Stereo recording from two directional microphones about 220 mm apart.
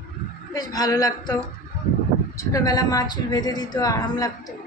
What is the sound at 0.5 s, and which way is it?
Speech, 15° left (ahead or behind).